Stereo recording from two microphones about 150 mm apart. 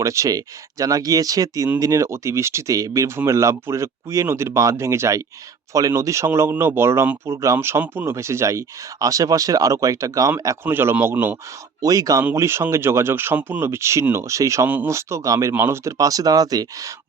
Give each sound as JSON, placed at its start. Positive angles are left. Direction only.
{"t": 0.0, "sound": "speech", "side_deg": -20}